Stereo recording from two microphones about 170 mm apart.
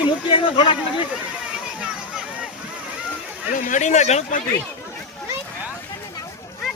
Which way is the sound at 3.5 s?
50° left (ahead or behind).